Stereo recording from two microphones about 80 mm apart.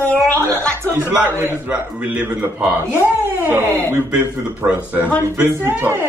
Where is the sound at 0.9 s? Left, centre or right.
Right.